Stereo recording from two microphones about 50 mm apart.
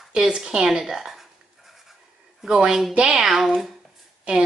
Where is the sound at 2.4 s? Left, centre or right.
Centre.